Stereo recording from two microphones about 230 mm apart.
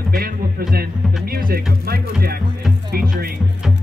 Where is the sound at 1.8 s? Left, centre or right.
Right.